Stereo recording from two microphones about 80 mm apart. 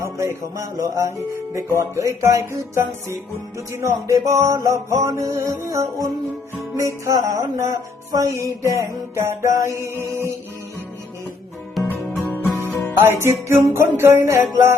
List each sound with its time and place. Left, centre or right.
0.0 s music: right
12.0 s music: centre
13.0 s music: right